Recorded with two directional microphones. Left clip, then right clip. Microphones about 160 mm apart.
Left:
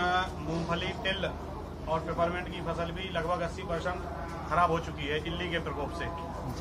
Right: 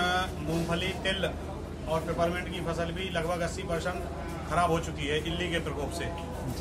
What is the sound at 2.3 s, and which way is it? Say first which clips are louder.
Speech: right 1 dB; 40° right (ahead or behind).